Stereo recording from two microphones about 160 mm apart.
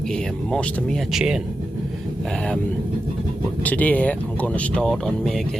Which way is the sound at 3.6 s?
10° left (ahead or behind).